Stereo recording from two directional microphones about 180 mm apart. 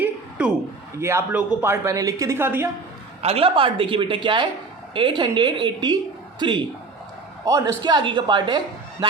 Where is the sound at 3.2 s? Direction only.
35° right (ahead or behind).